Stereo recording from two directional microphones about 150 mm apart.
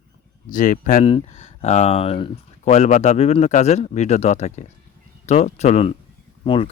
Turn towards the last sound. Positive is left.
turn(degrees=35)  # may be behind; listen again after turning